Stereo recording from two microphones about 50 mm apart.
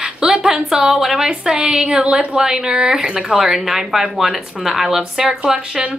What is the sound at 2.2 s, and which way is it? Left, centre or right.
Speech, centre.